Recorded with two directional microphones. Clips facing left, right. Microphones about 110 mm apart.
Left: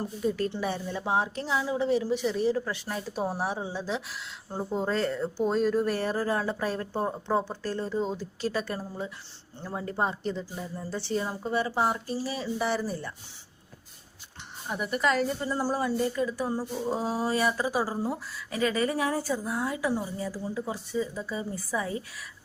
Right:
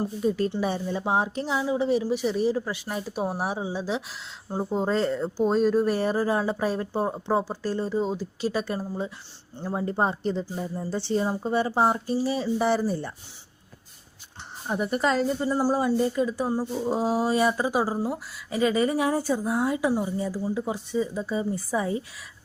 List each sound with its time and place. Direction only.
0.6 s a woman's voice: 20° right (ahead or behind)
14.7 s a woman's voice: 35° right (ahead or behind)